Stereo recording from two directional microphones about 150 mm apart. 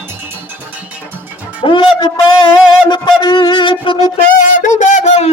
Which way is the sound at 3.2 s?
30° left (ahead or behind).